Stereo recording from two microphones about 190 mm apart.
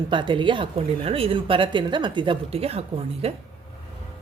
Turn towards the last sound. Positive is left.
turn(degrees=-30)  # may be behind; listen again after turning